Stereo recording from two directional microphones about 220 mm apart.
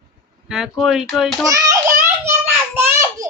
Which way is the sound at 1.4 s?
15° right (ahead or behind).